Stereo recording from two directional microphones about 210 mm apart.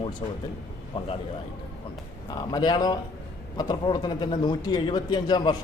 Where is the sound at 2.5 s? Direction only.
20° left (ahead or behind).